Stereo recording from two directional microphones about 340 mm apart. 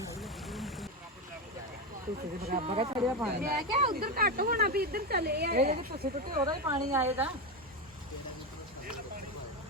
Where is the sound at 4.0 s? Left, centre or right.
Right; by 7.0 s centre.